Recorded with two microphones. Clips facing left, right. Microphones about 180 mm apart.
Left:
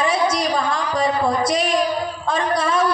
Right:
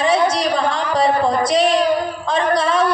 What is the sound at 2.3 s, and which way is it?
Speech, 30° right (ahead or behind).